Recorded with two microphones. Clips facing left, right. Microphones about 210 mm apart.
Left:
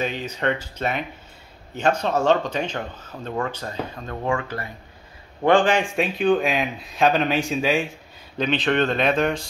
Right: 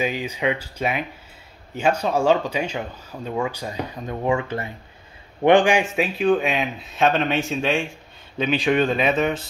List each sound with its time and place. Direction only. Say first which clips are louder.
0.0 s speech: right 1 dB; 10° right (ahead or behind)
5.9 s speech: even; centre (ahead or behind)
8.4 s speech: right 1 dB; 10° right (ahead or behind)